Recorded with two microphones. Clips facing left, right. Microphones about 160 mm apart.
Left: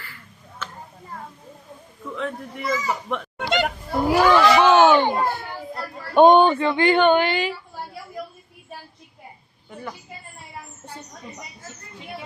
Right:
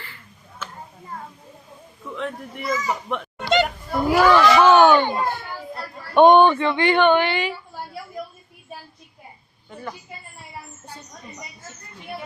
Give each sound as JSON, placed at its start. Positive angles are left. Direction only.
{"t": 2.1, "sound": "a child's voice", "side_deg": 0}
{"t": 4.1, "sound": "children playing", "side_deg": 15}
{"t": 6.1, "sound": "speech", "side_deg": 40}